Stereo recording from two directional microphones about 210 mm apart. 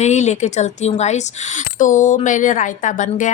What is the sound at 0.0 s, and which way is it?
Speech, 35° left (ahead or behind).